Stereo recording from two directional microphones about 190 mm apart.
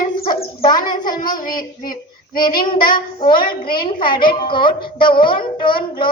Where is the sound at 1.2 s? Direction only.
45° left (ahead or behind).